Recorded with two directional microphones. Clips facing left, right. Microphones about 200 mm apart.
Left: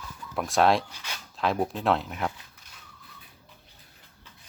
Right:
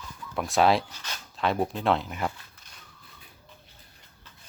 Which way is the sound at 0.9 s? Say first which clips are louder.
Even; 10° left (ahead or behind).